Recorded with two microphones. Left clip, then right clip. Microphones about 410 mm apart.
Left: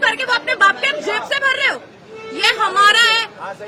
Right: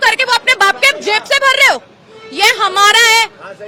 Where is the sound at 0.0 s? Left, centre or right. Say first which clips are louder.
Right 6 dB; right.